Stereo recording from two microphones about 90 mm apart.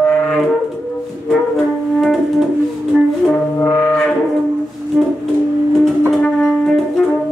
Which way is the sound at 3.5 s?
20° left (ahead or behind).